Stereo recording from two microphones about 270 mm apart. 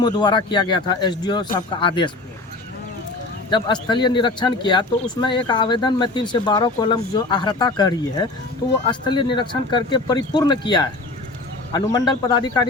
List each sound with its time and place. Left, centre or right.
0.0 s speech: centre
3.5 s speech: centre